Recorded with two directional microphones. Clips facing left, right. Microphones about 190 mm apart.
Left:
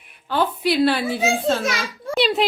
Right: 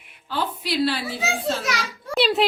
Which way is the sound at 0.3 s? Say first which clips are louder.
Left 6 dB; 55° left (ahead or behind).